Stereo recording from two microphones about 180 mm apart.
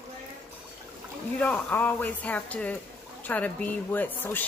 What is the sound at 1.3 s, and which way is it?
Speech, 10° left (ahead or behind).